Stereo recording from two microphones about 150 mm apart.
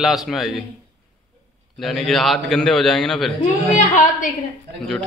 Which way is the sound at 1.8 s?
Centre (ahead or behind).